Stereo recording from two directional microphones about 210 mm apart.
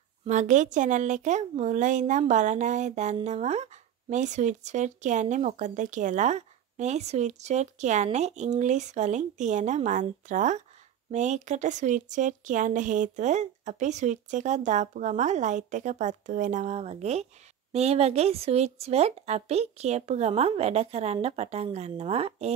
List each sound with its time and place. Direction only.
0.3 s speech: 35° right (ahead or behind)